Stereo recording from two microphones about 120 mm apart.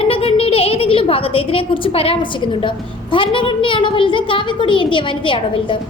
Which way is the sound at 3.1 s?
45° left (ahead or behind).